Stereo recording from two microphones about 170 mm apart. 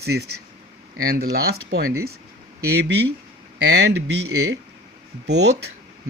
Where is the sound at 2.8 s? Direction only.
90° right.